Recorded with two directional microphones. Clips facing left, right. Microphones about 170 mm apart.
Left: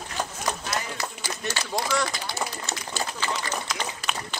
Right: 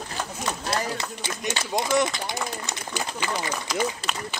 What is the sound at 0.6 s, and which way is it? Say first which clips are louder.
Run: right 4 dB; 35° right (ahead or behind).